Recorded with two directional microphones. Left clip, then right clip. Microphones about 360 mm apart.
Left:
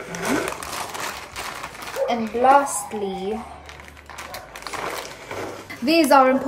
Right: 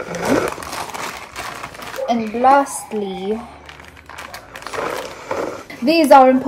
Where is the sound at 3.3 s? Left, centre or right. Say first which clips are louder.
Right 5 dB; centre.